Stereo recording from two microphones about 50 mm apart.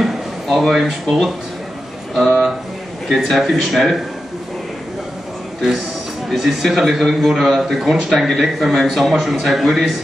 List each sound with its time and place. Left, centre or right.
0.0 s a man's voice: centre
6.3 s a man's voice: centre